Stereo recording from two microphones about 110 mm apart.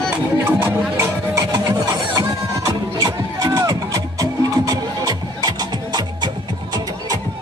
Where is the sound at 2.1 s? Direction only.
35° right (ahead or behind).